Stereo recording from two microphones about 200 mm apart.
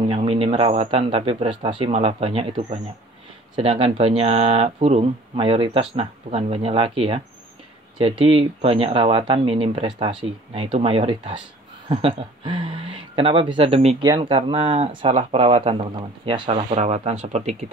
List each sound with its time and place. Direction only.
0.1 s speech: 30° right (ahead or behind)